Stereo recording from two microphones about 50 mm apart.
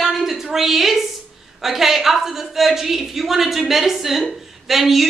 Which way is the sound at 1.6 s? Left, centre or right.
Centre.